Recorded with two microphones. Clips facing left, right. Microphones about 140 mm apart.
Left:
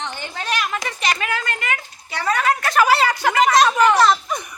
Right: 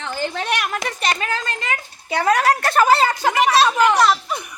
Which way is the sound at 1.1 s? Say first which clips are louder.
Left 2 dB; 30° right (ahead or behind).